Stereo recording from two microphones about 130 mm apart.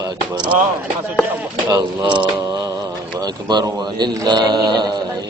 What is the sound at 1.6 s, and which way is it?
Speech, 35° right (ahead or behind).